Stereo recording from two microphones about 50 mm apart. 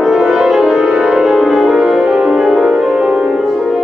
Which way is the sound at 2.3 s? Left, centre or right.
Centre.